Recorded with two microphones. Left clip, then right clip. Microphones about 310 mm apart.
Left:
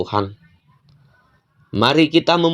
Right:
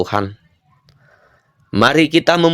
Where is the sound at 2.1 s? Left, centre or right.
Right.